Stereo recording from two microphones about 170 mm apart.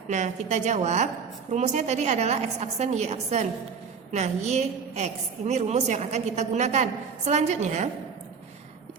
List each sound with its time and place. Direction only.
0.1 s a woman's voice: 45° right (ahead or behind)